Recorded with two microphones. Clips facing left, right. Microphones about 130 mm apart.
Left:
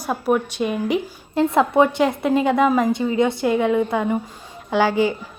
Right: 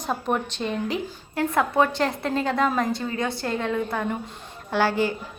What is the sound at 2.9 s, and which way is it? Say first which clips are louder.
A woman's voice: left 8 dB; 20° left (ahead or behind).